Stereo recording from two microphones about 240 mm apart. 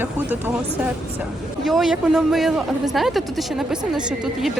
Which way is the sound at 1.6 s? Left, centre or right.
Centre.